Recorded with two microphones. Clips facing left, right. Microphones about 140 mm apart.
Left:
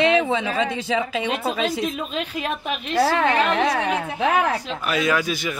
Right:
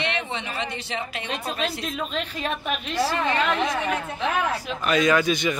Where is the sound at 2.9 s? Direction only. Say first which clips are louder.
Left 6 dB; 65° left (ahead or behind).